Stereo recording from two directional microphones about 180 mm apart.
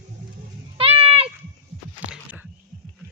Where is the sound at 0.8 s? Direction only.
30° right (ahead or behind).